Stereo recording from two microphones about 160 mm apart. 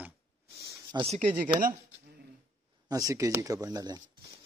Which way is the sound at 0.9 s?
25° right (ahead or behind).